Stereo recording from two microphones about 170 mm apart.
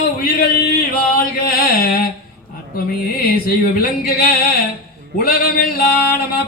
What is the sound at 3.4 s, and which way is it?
Speech, 60° left (ahead or behind).